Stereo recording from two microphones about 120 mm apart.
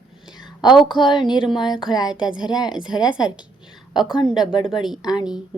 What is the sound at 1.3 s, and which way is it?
Speech, 5° right (ahead or behind).